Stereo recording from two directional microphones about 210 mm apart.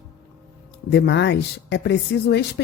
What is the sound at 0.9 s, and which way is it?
A woman's voice, 55° left (ahead or behind).